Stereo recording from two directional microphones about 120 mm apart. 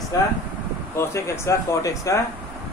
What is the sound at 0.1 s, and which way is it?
Speech, 25° left (ahead or behind).